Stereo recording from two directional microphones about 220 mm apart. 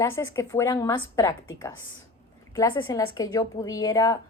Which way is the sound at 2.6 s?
15° left (ahead or behind).